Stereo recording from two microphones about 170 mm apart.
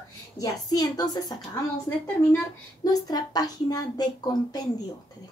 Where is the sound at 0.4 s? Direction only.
25° left (ahead or behind).